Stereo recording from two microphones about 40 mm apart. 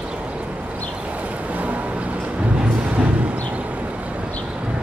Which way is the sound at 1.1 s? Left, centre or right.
Right.